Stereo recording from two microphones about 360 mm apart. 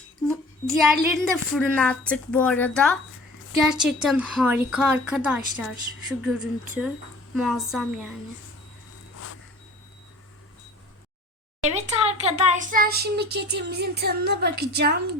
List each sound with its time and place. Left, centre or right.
0.3 s a woman's voice: centre
11.6 s a child's voice: centre